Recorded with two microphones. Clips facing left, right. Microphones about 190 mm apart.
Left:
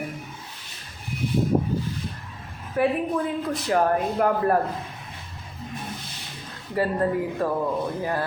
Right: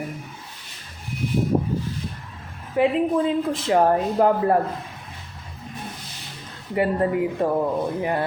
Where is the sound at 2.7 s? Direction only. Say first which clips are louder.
Right 3 dB; 20° right (ahead or behind).